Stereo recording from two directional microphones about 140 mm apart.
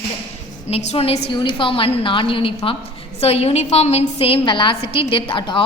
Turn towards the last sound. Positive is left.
turn(degrees=35)  # may be behind; listen again after turning